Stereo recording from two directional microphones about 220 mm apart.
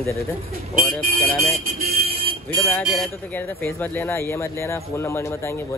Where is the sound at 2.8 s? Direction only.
Centre (ahead or behind).